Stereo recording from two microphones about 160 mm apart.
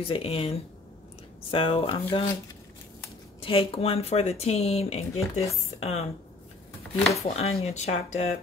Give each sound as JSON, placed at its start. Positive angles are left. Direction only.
{"t": 0.0, "sound": "speech", "side_deg": 35}
{"t": 2.1, "sound": "speech", "side_deg": 25}
{"t": 3.3, "sound": "speech", "side_deg": 35}
{"t": 7.2, "sound": "speech", "side_deg": 40}